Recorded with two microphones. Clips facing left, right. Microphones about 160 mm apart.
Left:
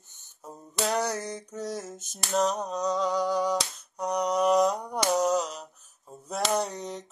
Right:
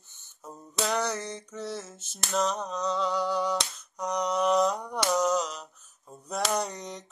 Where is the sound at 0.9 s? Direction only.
40° left (ahead or behind).